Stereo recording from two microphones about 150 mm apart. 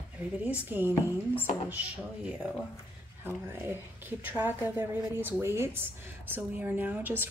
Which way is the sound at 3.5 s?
15° right (ahead or behind).